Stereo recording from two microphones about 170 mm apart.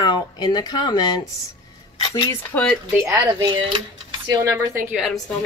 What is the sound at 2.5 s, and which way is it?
Speech, 10° left (ahead or behind).